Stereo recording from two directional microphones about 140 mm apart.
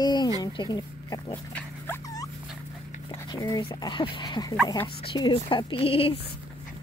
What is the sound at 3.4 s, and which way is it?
Speech, 25° left (ahead or behind).